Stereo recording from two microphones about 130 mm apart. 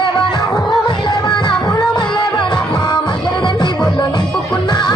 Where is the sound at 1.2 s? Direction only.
35° left (ahead or behind).